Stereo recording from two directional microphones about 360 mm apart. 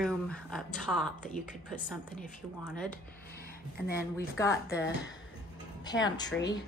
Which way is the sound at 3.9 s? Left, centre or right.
Left.